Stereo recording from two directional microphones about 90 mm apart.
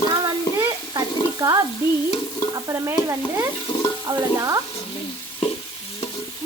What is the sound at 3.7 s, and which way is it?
Stir, 90° left.